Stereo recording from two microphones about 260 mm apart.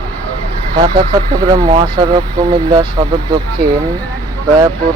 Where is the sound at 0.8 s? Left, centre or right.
Centre.